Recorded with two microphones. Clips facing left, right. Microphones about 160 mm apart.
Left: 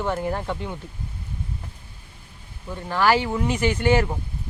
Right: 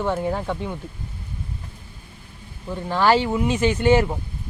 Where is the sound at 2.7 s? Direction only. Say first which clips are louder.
Right 2 dB; 15° right (ahead or behind).